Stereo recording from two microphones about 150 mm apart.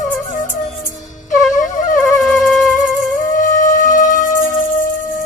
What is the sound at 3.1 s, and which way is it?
Music, 60° left (ahead or behind).